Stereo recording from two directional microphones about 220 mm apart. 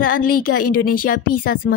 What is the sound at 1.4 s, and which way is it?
Speech, 40° left (ahead or behind).